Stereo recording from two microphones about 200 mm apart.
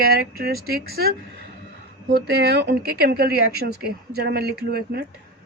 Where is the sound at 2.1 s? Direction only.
55° right (ahead or behind).